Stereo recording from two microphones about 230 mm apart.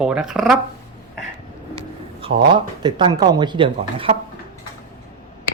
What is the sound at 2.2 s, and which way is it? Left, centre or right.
Speech, right.